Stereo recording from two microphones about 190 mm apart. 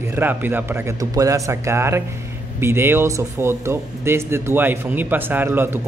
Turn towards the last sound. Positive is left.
turn(degrees=-10)  # may be behind; listen again after turning